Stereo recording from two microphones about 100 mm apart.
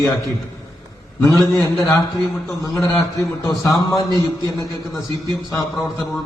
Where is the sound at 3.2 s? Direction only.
35° left (ahead or behind).